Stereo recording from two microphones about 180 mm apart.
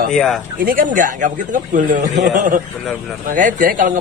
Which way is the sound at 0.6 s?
50° right (ahead or behind).